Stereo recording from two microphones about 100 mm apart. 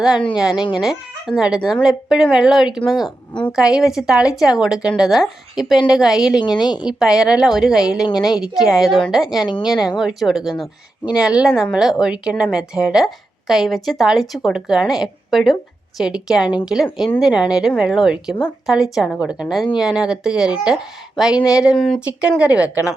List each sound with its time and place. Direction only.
0.3 s a woman's voice: 10° right (ahead or behind)
6.4 s a woman's voice: 45° left (ahead or behind)
6.8 s a woman's voice: 5° right (ahead or behind)
21.8 s speech: 5° left (ahead or behind)
22.0 s a woman's voice: 15° right (ahead or behind)